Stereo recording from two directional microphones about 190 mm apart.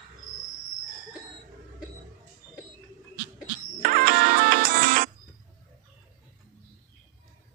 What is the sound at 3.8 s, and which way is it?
Music, 50° right (ahead or behind).